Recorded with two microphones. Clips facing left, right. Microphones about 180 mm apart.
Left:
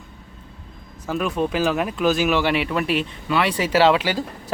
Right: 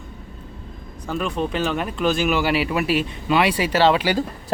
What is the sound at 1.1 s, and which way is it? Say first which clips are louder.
Speech: left 2 dB; 5° left (ahead or behind).